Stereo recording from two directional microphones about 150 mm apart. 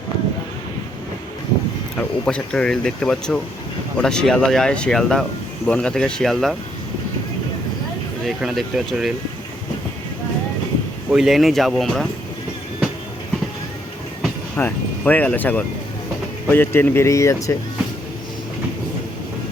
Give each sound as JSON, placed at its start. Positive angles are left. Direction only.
{"t": 2.0, "sound": "speech", "side_deg": 5}
{"t": 8.4, "sound": "speech", "side_deg": -5}
{"t": 11.1, "sound": "speech", "side_deg": 0}
{"t": 14.5, "sound": "speech", "side_deg": 10}